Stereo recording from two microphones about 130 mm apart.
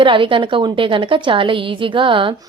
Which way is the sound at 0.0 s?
40° right (ahead or behind).